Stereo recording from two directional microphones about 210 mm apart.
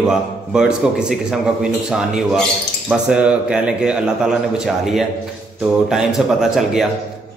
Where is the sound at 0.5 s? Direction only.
5° right (ahead or behind).